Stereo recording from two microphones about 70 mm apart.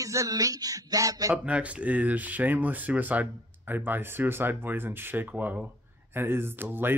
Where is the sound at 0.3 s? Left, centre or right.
Right.